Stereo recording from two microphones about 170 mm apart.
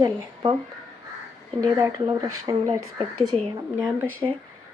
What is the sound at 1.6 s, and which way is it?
Speech, 25° right (ahead or behind).